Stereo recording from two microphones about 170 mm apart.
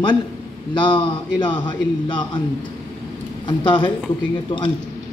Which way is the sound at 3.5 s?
30° left (ahead or behind).